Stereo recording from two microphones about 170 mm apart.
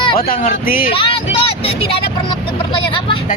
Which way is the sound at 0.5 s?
60° left (ahead or behind).